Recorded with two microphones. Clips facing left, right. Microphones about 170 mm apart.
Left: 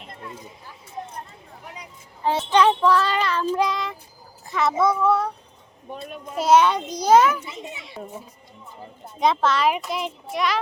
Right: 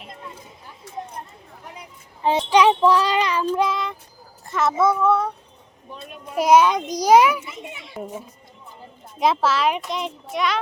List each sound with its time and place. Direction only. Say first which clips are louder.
2.2 s speech: right 2 dB; 15° right (ahead or behind)
3.4 s a child's voice: right 1 dB; centre (ahead or behind)
6.3 s speech: right 2 dB; 10° right (ahead or behind)
8.0 s a child's voice: right 5 dB; centre (ahead or behind)
9.2 s a child's voice: even; 5° right (ahead or behind)